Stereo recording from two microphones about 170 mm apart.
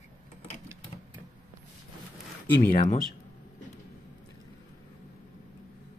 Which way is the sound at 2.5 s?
60° left (ahead or behind).